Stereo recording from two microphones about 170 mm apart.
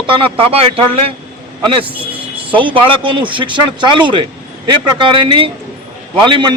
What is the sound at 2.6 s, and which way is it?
Speech, 30° right (ahead or behind).